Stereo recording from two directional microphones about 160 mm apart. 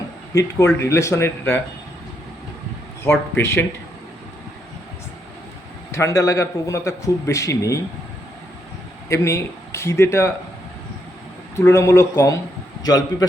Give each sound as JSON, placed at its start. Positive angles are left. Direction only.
{"t": 0.3, "sound": "speech", "side_deg": 20}
{"t": 3.0, "sound": "speech", "side_deg": 15}
{"t": 5.9, "sound": "a man's voice", "side_deg": 20}
{"t": 9.0, "sound": "speech", "side_deg": 20}
{"t": 11.5, "sound": "a man's voice", "side_deg": 15}